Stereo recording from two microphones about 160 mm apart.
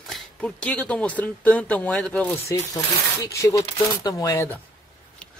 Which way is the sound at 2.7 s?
20° left (ahead or behind).